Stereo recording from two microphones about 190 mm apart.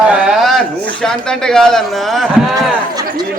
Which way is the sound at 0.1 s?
5° right (ahead or behind).